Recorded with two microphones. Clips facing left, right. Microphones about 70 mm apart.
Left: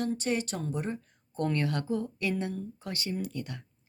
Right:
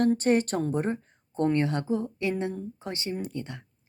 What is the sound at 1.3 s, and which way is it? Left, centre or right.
Speech, right.